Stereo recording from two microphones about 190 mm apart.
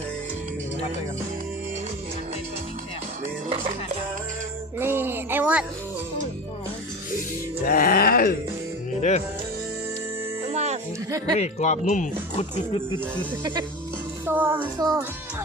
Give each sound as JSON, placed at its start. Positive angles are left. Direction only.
{"t": 4.8, "sound": "a sound", "side_deg": -10}
{"t": 7.6, "sound": "groan", "side_deg": 50}
{"t": 9.0, "sound": "music", "side_deg": 40}
{"t": 10.5, "sound": "music", "side_deg": -35}
{"t": 11.3, "sound": "speech", "side_deg": 35}
{"t": 13.1, "sound": "speech", "side_deg": -20}
{"t": 14.3, "sound": "music", "side_deg": -10}